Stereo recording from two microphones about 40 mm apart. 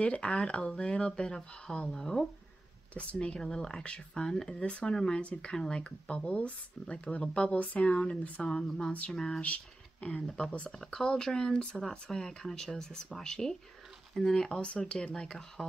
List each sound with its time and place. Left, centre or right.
0.0 s speech: left; by 2.2 s centre
2.9 s speech: left
3.3 s speech: centre
5.2 s speech: left
5.5 s speech: left
9.4 s speech: left
10.8 s speech: centre